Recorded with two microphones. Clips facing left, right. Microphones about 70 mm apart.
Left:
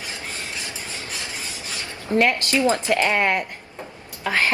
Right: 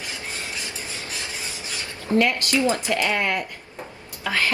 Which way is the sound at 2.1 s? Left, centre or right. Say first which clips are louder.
Left 1 dB; left.